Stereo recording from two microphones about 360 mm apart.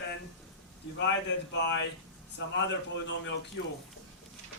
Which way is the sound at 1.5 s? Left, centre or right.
Left.